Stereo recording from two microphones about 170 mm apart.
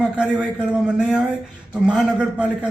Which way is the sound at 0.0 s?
5° right (ahead or behind).